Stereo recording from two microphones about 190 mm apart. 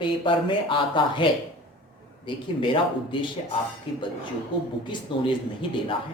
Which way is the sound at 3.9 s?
30° left (ahead or behind).